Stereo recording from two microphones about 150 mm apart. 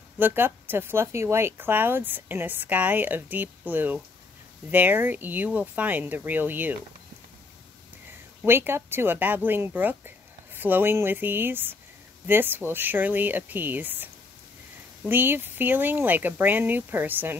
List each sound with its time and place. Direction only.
0.2 s speech: 15° right (ahead or behind)
8.5 s speech: 15° right (ahead or behind)